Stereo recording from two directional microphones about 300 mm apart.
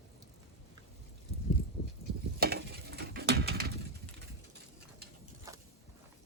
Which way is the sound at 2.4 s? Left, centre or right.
Right.